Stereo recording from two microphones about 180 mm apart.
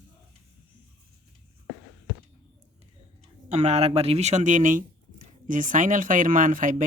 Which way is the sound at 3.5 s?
35° right (ahead or behind).